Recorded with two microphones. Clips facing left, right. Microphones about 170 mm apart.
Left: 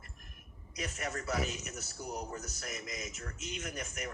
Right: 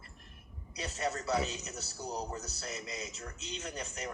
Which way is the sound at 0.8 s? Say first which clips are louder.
Right 3 dB; 30° right (ahead or behind).